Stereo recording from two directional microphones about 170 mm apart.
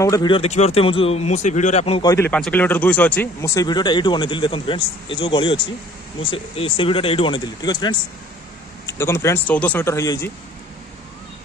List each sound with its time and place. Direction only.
0.0 s speech: 20° left (ahead or behind)
0.4 s speech: 40° left (ahead or behind)
2.0 s speech: 15° left (ahead or behind)